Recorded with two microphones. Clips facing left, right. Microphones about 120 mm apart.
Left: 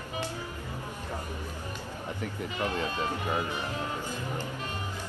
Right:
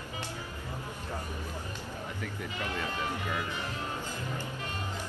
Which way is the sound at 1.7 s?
15° left (ahead or behind).